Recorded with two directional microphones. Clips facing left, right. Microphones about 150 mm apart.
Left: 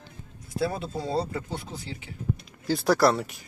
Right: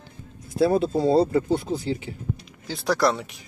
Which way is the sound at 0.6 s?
30° right (ahead or behind).